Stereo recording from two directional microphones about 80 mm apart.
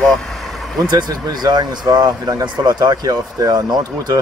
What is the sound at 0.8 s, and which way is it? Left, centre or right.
Speech, right.